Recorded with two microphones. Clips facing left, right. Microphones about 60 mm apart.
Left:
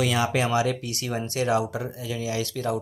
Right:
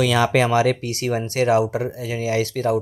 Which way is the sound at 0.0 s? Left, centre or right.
Right.